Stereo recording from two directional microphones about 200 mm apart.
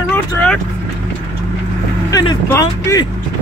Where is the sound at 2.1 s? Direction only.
15° left (ahead or behind).